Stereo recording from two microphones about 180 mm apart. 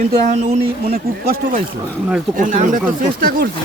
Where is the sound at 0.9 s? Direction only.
55° right (ahead or behind).